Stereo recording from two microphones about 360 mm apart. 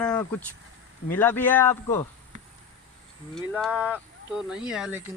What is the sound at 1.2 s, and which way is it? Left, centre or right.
Speech, centre.